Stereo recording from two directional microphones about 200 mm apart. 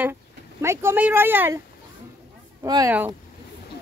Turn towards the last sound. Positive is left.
turn(degrees=-15)  # may be behind; listen again after turning